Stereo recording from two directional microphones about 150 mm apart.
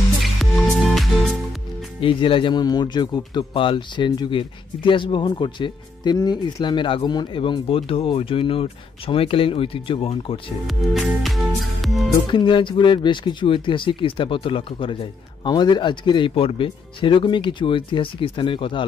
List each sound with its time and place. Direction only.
0.2 s music: centre (ahead or behind)
2.0 s speech: 35° left (ahead or behind)
10.7 s music: centre (ahead or behind)
12.3 s speech: 35° left (ahead or behind)